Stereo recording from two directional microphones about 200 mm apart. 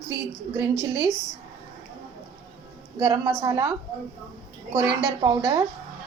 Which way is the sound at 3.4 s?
15° right (ahead or behind).